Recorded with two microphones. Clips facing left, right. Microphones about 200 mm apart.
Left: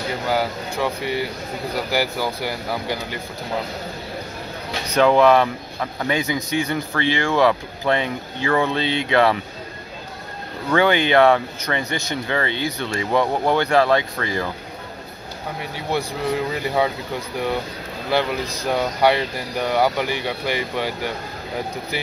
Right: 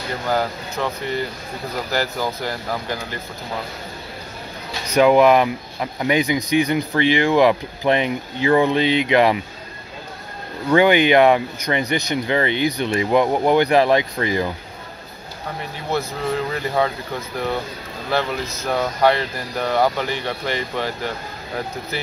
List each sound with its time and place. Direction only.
0.3 s speech: 10° left (ahead or behind)
4.9 s speech: 15° right (ahead or behind)
10.7 s speech: 15° right (ahead or behind)
15.9 s speech: 15° left (ahead or behind)